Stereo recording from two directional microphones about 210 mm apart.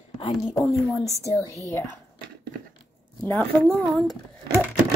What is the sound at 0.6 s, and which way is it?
Speech, 15° left (ahead or behind).